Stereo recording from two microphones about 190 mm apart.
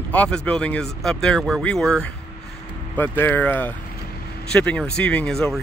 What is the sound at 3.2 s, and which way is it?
Speech, 10° left (ahead or behind).